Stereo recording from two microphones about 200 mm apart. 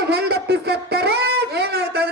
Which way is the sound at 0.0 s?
55° right (ahead or behind).